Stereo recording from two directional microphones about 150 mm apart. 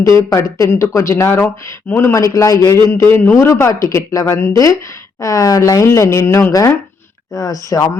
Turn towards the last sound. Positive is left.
turn(degrees=25)  # may be behind; listen again after turning